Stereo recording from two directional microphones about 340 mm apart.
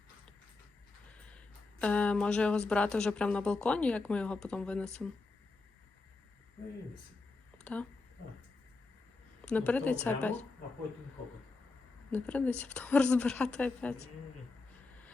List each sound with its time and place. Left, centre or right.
1.8 s speech: centre
7.6 s speech: centre
9.4 s speech: centre
12.1 s speech: centre